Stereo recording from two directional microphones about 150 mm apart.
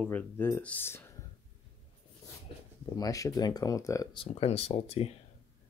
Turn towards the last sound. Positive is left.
turn(degrees=45)  # may be behind; listen again after turning